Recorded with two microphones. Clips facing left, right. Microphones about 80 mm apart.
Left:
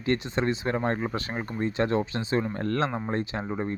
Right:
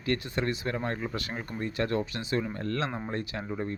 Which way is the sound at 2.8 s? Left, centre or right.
Left.